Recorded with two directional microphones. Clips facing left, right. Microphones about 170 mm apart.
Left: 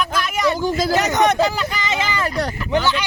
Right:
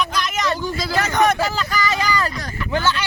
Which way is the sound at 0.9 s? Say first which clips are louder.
Right 1 dB; 20° left (ahead or behind).